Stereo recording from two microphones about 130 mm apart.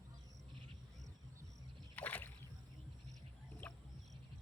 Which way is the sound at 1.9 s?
10° left (ahead or behind).